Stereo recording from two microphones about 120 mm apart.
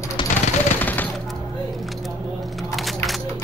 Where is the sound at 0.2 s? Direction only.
45° left (ahead or behind).